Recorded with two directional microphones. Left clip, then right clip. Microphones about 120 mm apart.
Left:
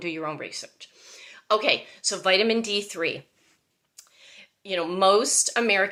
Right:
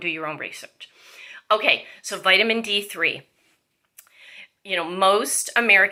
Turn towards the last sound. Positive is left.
turn(degrees=40)  # may be behind; listen again after turning